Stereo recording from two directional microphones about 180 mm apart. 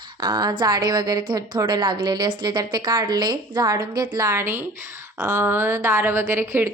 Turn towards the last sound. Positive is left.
turn(degrees=-15)  # may be behind; listen again after turning